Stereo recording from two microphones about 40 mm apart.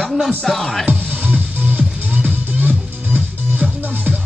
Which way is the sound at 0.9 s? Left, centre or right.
Right.